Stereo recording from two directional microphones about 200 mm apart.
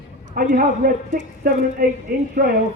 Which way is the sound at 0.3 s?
45° right (ahead or behind).